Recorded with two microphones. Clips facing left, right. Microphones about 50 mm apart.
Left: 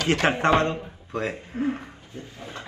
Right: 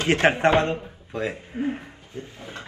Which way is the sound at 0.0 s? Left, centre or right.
Right.